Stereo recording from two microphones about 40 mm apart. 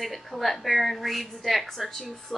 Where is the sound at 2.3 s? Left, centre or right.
Left.